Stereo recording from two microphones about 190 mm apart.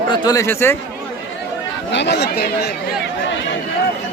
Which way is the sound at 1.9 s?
65° left (ahead or behind).